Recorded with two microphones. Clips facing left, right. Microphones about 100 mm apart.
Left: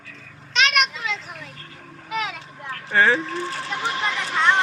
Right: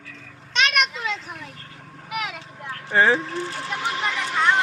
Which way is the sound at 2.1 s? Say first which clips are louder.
Left 2 dB; 10° right (ahead or behind).